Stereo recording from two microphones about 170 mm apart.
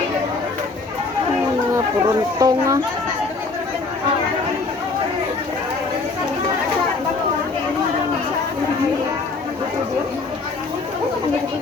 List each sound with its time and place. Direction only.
2.4 s speech: 20° right (ahead or behind)